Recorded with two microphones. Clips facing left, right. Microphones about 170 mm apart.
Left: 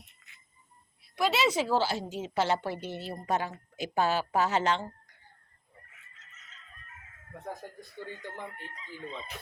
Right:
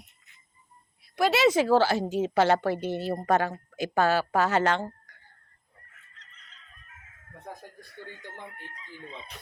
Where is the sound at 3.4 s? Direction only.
70° right (ahead or behind).